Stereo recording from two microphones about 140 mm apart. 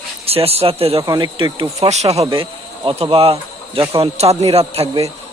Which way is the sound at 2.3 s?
40° right (ahead or behind).